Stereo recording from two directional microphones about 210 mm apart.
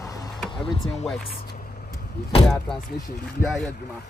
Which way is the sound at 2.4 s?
5° left (ahead or behind).